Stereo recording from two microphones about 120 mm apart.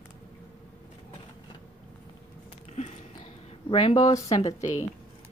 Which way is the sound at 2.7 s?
65° left (ahead or behind).